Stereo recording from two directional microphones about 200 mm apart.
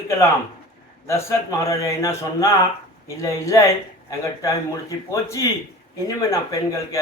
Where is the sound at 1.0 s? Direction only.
15° left (ahead or behind).